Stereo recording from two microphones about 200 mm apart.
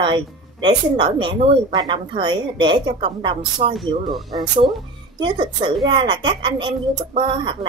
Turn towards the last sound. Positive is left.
turn(degrees=-25)  # may be behind; listen again after turning